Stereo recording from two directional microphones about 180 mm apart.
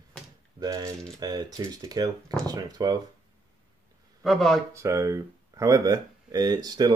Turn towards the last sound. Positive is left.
turn(degrees=-20)  # may be behind; listen again after turning